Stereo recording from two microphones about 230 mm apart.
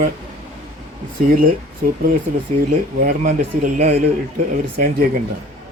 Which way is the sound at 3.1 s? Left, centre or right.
Right.